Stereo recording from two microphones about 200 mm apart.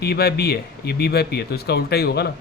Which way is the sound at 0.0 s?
55° left (ahead or behind).